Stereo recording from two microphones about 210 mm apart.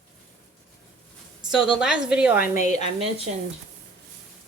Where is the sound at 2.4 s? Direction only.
35° left (ahead or behind).